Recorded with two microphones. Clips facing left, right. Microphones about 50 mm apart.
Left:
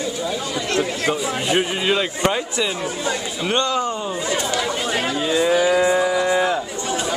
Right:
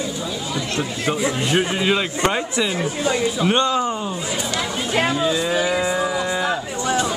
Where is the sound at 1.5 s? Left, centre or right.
Centre.